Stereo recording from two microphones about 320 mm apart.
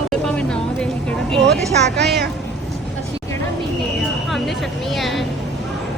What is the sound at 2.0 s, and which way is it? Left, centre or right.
Speech, right.